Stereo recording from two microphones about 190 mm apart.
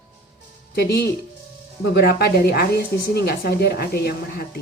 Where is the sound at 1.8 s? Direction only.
55° left (ahead or behind).